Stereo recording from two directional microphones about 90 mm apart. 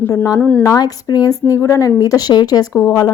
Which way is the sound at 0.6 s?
45° left (ahead or behind).